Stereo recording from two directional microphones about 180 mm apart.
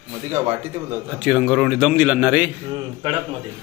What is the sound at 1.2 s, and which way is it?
A man's voice, 5° right (ahead or behind).